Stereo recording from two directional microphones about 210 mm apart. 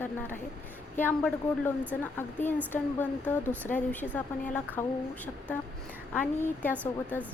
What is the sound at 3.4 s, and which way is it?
Speech, 10° right (ahead or behind).